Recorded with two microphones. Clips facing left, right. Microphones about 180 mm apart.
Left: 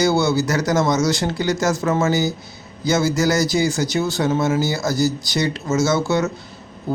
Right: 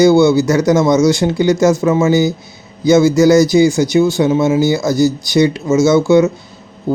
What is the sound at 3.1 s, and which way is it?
A man's voice, 15° right (ahead or behind).